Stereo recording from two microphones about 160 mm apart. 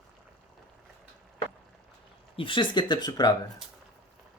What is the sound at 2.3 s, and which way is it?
Speech, 30° left (ahead or behind).